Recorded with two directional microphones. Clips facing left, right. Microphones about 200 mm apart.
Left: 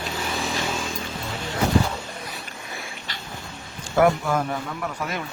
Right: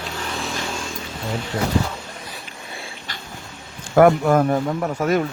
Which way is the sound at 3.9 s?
50° right (ahead or behind).